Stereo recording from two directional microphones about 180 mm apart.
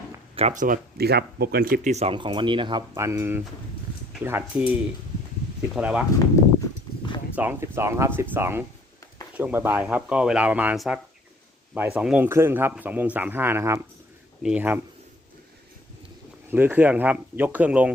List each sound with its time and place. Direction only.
0.3 s speech: 40° right (ahead or behind)
2.9 s a man's voice: 15° right (ahead or behind)
6.1 s clip-clop: 20° left (ahead or behind)
7.3 s a man's voice: 10° right (ahead or behind)
16.5 s a man's voice: 10° right (ahead or behind)